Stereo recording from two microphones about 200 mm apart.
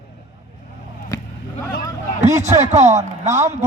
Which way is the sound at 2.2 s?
35° right (ahead or behind).